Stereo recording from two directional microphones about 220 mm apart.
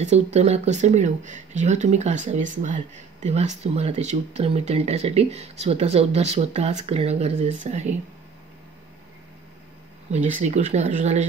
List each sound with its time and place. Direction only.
0.0 s speech: 30° right (ahead or behind)
10.1 s speech: 30° right (ahead or behind)